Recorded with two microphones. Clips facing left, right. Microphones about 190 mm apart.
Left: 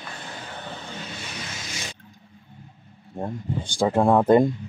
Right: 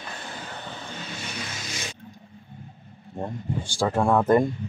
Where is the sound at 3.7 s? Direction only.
20° left (ahead or behind).